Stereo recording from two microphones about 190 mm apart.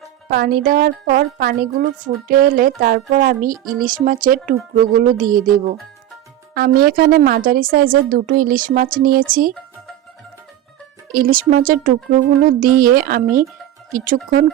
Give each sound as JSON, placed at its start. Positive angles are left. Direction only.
{"t": 0.3, "sound": "a woman's voice", "side_deg": -50}
{"t": 11.1, "sound": "a woman's voice", "side_deg": -50}